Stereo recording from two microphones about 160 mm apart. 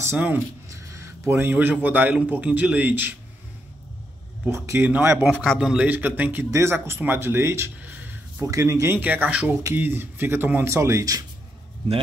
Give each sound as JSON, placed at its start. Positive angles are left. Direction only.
{"t": 0.0, "sound": "speech", "side_deg": -15}
{"t": 4.5, "sound": "speech", "side_deg": -15}
{"t": 5.3, "sound": "speech", "side_deg": 0}